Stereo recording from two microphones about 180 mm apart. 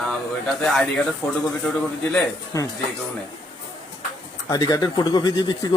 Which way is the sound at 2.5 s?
20° left (ahead or behind).